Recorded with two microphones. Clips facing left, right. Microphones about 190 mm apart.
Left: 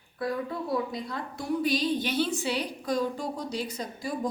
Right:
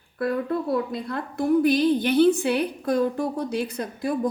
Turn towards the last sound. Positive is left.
turn(degrees=-55)  # may be behind; listen again after turning